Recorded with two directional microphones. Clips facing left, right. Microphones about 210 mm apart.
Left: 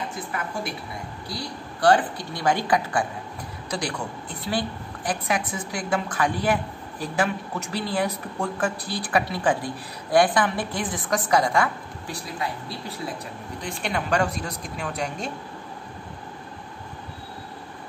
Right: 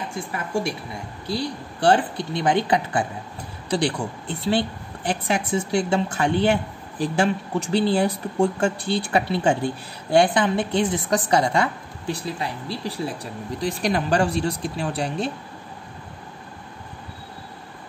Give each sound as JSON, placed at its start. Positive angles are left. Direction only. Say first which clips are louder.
{"t": 1.3, "sound": "a woman's voice", "louder": "right 9 dB", "side_deg": -25}